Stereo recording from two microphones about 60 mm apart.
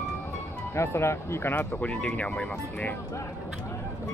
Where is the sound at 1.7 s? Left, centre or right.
Left.